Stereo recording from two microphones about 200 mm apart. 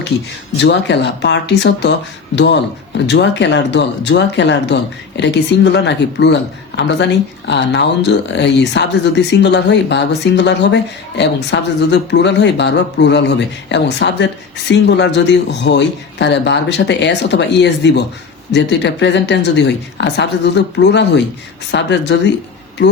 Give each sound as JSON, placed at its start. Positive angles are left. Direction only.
{"t": 0.5, "sound": "speech", "side_deg": 60}